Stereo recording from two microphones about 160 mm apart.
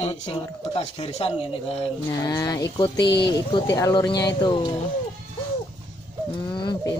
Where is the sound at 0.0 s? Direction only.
40° left (ahead or behind).